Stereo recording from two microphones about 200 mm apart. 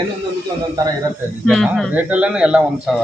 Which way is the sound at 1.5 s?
Centre (ahead or behind).